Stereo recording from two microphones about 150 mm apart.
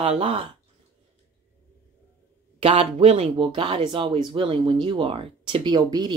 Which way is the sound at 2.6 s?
40° right (ahead or behind).